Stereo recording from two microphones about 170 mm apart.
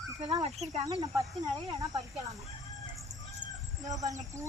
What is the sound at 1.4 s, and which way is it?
Speech, 20° right (ahead or behind).